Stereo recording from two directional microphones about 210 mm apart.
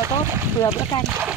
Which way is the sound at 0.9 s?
15° left (ahead or behind).